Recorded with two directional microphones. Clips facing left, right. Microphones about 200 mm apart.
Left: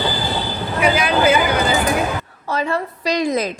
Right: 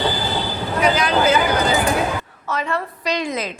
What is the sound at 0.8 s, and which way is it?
Speech, 10° left (ahead or behind).